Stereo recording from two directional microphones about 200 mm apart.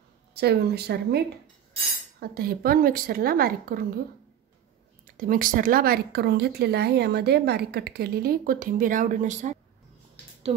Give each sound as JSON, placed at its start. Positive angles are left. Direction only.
{"t": 0.3, "sound": "speech", "side_deg": -55}
{"t": 5.0, "sound": "speech", "side_deg": -45}